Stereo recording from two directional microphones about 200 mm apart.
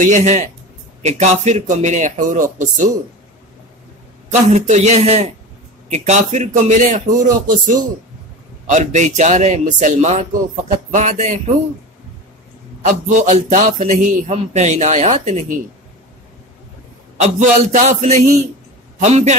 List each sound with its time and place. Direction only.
0.0 s a man's voice: 35° right (ahead or behind)
4.3 s a man's voice: 35° right (ahead or behind)
12.8 s a man's voice: 35° right (ahead or behind)
17.2 s a man's voice: 35° right (ahead or behind)